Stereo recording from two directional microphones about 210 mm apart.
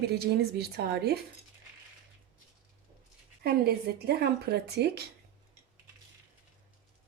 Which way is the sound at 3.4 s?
50° right (ahead or behind).